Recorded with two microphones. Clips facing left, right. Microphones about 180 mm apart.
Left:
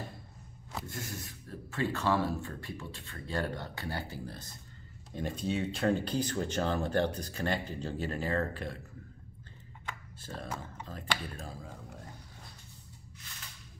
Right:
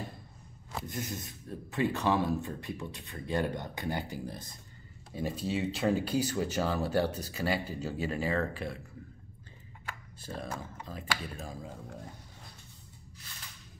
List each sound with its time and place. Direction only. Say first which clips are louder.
0.8 s speech: right 3 dB; 20° right (ahead or behind)
5.1 s speech: right 1 dB; 5° right (ahead or behind)
9.8 s speech: right 1 dB; 10° right (ahead or behind)